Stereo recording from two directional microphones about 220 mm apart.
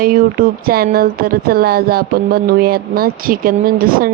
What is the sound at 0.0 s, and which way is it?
Speech, 40° right (ahead or behind).